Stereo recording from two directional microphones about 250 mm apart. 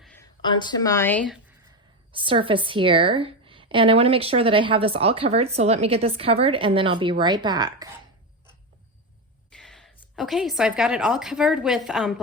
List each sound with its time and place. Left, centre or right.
0.0 s a sound: centre
0.4 s speech: centre
2.1 s a woman's voice: right
9.5 s a woman's voice: centre